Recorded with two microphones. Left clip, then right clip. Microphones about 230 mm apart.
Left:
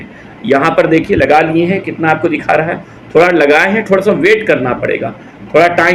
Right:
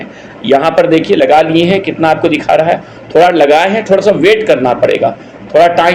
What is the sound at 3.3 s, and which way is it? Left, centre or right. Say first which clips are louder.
Speech: right 1 dB; right.